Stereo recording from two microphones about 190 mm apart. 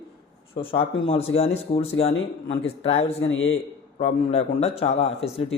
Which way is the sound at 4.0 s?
30° left (ahead or behind).